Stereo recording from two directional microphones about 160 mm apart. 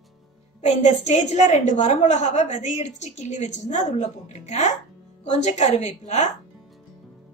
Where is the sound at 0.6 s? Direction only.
45° left (ahead or behind).